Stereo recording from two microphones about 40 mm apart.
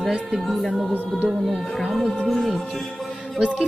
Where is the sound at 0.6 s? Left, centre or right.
Centre.